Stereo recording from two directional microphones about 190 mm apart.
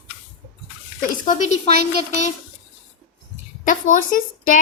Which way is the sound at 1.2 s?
40° left (ahead or behind).